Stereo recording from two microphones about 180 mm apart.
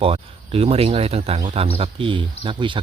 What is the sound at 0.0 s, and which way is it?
Speech, 30° right (ahead or behind).